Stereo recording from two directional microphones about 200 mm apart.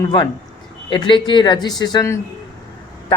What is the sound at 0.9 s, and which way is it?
Speech, 25° left (ahead or behind).